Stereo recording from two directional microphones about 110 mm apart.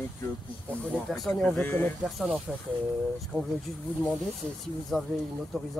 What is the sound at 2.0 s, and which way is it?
Speech, centre (ahead or behind).